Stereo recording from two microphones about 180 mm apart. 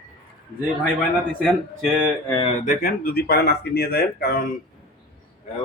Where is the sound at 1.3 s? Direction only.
5° left (ahead or behind).